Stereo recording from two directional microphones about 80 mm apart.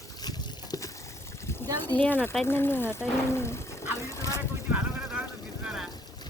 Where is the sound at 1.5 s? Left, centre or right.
Left.